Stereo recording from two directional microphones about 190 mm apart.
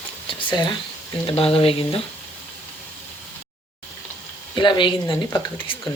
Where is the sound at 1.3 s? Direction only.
30° left (ahead or behind).